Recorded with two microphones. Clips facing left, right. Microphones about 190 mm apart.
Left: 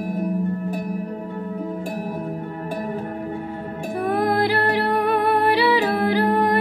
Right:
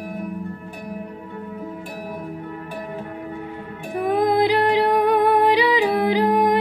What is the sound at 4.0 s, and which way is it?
Music, 15° right (ahead or behind).